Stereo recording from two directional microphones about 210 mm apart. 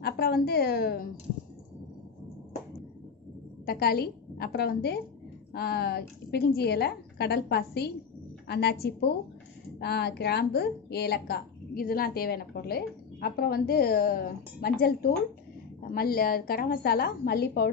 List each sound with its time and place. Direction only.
0.0 s a woman's voice: 45° left (ahead or behind)
3.6 s a woman's voice: 45° left (ahead or behind)